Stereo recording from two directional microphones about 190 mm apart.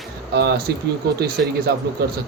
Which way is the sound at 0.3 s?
60° right (ahead or behind).